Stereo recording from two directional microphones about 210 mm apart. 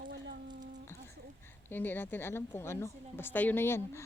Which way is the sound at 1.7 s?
10° left (ahead or behind).